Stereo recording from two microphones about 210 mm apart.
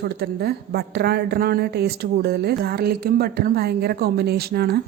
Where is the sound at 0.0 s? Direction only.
50° right (ahead or behind).